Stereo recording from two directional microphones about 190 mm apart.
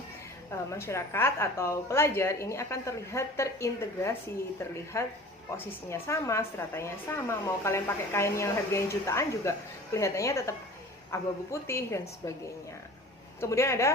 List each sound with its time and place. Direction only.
0.7 s a woman's voice: 15° left (ahead or behind)
13.4 s a woman's voice: 15° left (ahead or behind)